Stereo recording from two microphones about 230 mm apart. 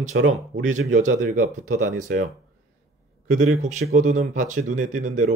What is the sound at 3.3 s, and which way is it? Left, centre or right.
Speech, right.